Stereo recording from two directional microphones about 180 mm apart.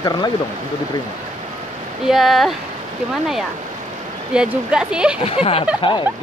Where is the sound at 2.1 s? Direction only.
Centre (ahead or behind).